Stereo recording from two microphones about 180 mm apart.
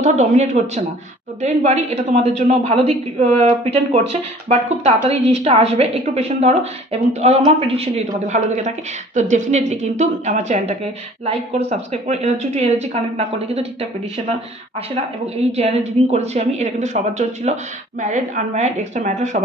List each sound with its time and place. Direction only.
0.0 s speech: 40° right (ahead or behind)
15.3 s speech: 35° right (ahead or behind)